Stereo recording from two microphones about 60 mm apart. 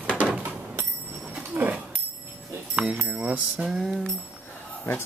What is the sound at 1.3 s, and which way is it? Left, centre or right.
Dog, right.